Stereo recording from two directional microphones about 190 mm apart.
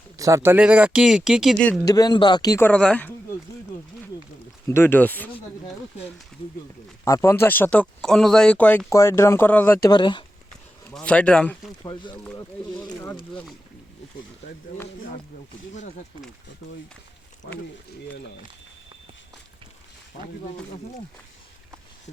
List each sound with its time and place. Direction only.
0.2 s speech: 15° right (ahead or behind); by 1.8 s centre (ahead or behind)
1.9 s speech: 20° left (ahead or behind)
4.7 s speech: 10° left (ahead or behind)
7.0 s speech: 15° left (ahead or behind)
9.9 s speech: 25° left (ahead or behind)
10.8 s speech: 5° left (ahead or behind)
11.8 s speech: 20° left (ahead or behind)
12.1 s speech: 10° left (ahead or behind)
12.8 s a sound: 20° left (ahead or behind)
13.3 s speech: 5° left (ahead or behind)
17.4 s speech: 60° left (ahead or behind)
20.2 s speech: 40° left (ahead or behind)